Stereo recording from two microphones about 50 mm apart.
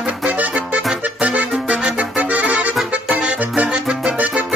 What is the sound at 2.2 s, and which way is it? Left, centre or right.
Accordion, right.